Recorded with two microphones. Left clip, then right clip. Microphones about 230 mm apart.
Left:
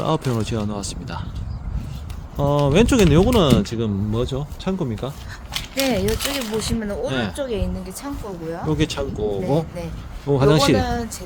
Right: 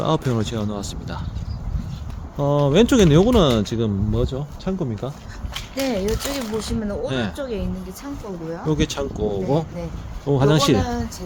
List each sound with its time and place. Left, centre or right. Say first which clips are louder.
0.0 s speech: right 1 dB; centre
2.4 s speech: even; centre
5.8 s speech: left 2 dB; left
7.1 s speech: left 1 dB; centre
7.3 s speech: left 2 dB; left
8.7 s speech: even; centre
10.8 s speech: left 2 dB; left